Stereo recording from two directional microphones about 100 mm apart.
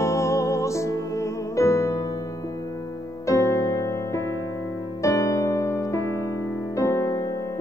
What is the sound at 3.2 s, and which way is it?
Music, 30° left (ahead or behind).